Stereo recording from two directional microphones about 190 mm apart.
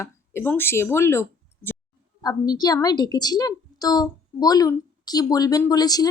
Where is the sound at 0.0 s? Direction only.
10° left (ahead or behind).